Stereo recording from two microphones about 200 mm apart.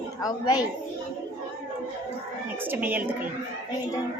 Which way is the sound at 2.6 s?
10° right (ahead or behind).